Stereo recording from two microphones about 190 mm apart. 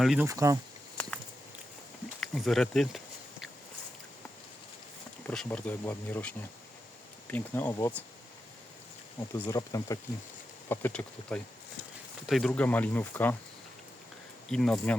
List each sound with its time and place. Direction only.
0.0 s speech: 5° right (ahead or behind)
0.3 s speech: 15° right (ahead or behind)
2.2 s speech: centre (ahead or behind)
5.2 s speech: 5° left (ahead or behind)
9.4 s speech: 15° left (ahead or behind)
14.5 s speech: 5° left (ahead or behind)